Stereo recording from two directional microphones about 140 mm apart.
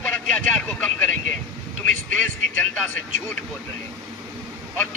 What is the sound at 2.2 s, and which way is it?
Speech, 10° left (ahead or behind).